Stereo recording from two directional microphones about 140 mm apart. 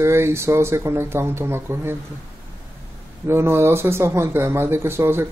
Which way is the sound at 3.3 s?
15° right (ahead or behind).